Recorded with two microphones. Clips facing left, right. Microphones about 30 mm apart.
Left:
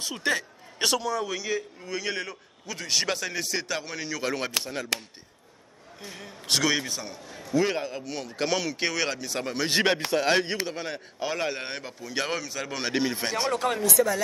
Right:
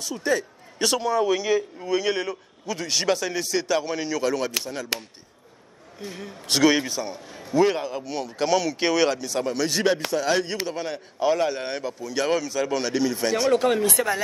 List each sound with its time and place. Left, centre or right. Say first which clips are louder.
0.0 s a man's voice: right 3 dB; left
0.9 s a man's voice: right 6 dB; centre
4.2 s a man's voice: right 1 dB; left
5.9 s a man's voice: right 5 dB; centre
8.7 s a man's voice: right 6 dB; centre
9.2 s a man's voice: right 4 dB; centre
9.7 s speech: right 1 dB; left
10.7 s a man's voice: right 4 dB; centre
12.8 s speech: right 3 dB; left
13.5 s a man's voice: right 8 dB; centre
13.8 s speech: even; right